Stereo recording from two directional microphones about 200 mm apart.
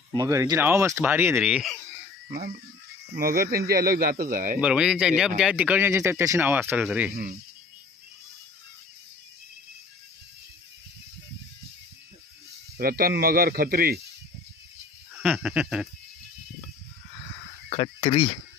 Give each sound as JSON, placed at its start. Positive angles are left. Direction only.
{"t": 0.1, "sound": "speech", "side_deg": -15}
{"t": 3.2, "sound": "speech", "side_deg": -45}
{"t": 4.6, "sound": "speech", "side_deg": -5}
{"t": 12.7, "sound": "speech", "side_deg": -50}
{"t": 15.1, "sound": "a sound", "side_deg": 0}
{"t": 17.6, "sound": "speech", "side_deg": 25}